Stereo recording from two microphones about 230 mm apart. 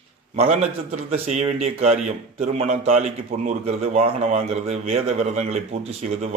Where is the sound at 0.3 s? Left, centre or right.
Right.